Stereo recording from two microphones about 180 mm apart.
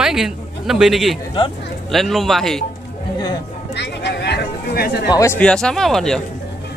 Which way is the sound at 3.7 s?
70° left (ahead or behind).